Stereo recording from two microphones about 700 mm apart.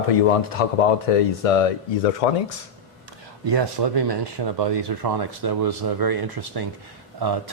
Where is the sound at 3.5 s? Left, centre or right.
Right.